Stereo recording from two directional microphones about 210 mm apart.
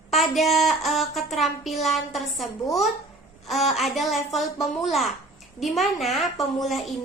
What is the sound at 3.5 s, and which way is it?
A woman's voice, centre (ahead or behind).